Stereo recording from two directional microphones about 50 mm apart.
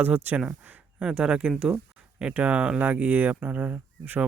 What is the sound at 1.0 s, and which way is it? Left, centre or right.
Speech, centre.